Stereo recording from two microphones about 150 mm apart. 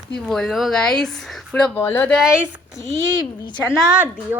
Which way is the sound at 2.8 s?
30° left (ahead or behind).